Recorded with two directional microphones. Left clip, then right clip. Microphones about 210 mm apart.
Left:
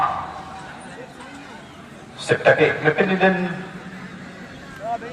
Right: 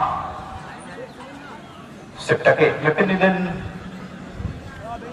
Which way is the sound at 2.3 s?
45° left (ahead or behind).